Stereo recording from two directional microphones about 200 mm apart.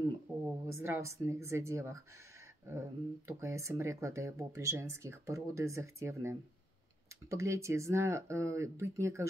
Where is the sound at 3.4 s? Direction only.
15° right (ahead or behind).